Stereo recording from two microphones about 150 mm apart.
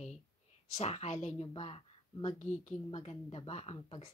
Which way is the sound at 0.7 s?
50° left (ahead or behind).